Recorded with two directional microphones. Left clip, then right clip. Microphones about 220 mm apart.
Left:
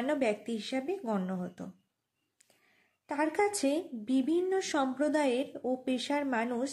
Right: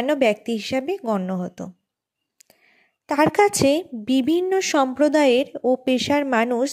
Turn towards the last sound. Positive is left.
turn(degrees=-35)  # may be behind; listen again after turning